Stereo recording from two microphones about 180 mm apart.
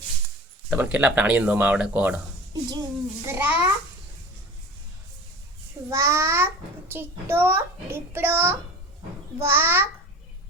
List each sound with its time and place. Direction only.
0.7 s a child's voice: 5° right (ahead or behind)
2.5 s a child's voice: 20° right (ahead or behind)
5.9 s a child's voice: 15° right (ahead or behind)